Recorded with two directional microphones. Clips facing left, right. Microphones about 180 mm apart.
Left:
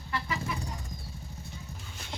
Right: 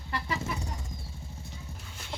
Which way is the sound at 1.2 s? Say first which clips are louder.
Even; 25° right (ahead or behind).